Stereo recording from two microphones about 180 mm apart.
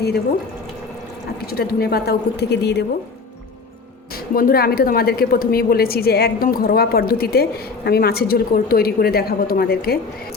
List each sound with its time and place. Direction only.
1.4 s a woman's voice: 60° left (ahead or behind)
4.4 s a woman's voice: 55° left (ahead or behind)